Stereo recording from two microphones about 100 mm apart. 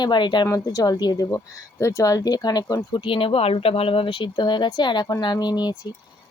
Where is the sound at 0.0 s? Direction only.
50° left (ahead or behind).